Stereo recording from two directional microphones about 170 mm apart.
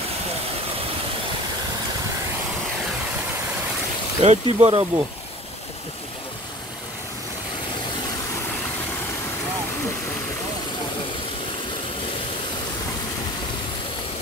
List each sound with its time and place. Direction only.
4.2 s speech: 40° right (ahead or behind)